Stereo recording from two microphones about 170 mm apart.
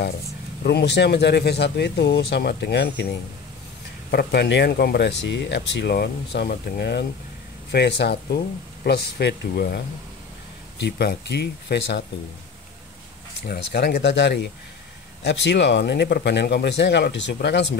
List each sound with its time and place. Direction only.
0.7 s speech: 80° left
4.1 s speech: 65° left (ahead or behind); by 7.1 s 85° left
7.7 s speech: 75° left (ahead or behind)
13.5 s speech: 70° left (ahead or behind); by 17.6 s 90° left